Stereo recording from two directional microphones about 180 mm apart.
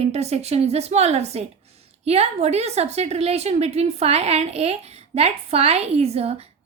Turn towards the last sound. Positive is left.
turn(degrees=-35)  # may be behind; listen again after turning